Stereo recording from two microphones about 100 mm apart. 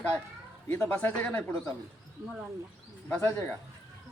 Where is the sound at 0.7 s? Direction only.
25° left (ahead or behind).